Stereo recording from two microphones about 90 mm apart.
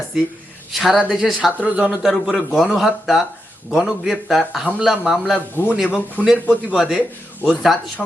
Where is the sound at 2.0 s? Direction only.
Centre (ahead or behind).